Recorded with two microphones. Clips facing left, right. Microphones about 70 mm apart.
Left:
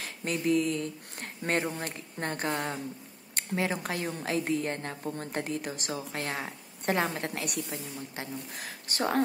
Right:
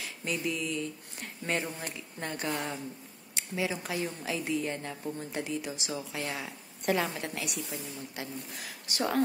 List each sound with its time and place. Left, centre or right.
0.0 s a woman's voice: left